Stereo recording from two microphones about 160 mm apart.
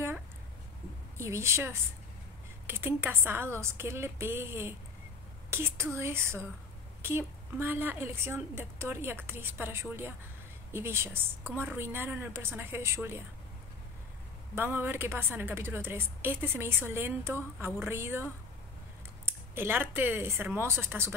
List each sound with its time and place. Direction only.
1.1 s a woman's voice: 15° right (ahead or behind)
14.5 s a woman's voice: 15° right (ahead or behind)